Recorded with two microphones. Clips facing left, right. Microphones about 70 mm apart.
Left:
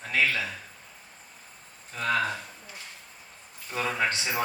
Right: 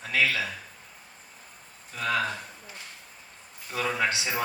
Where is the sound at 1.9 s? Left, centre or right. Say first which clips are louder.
Left 1 dB; left.